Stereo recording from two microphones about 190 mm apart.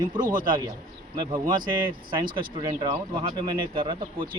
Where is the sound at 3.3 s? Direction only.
25° right (ahead or behind).